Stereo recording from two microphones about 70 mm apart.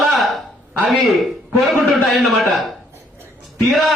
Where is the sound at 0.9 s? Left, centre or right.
Centre.